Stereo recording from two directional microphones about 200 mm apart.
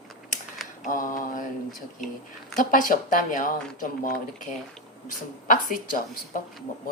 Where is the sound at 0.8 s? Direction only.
40° left (ahead or behind).